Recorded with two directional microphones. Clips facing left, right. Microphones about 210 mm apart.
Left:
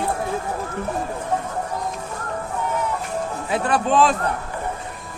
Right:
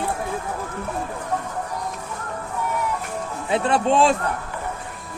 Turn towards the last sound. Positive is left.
turn(degrees=-25)  # may be behind; listen again after turning